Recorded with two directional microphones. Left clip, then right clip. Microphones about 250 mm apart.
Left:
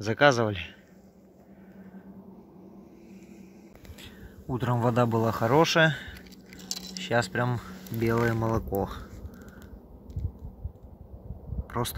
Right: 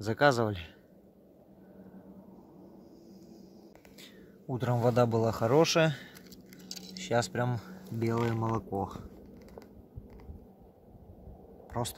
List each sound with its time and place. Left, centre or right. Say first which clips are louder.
0.0 s a man's voice: left 4 dB; centre
4.0 s speech: left 4 dB; centre
6.6 s keys jangling: left 8 dB; left
7.0 s speech: left 3 dB; centre
8.2 s speech: left 5 dB; left
8.5 s a man's voice: left 5 dB; centre
11.6 s a sound: left 4 dB; centre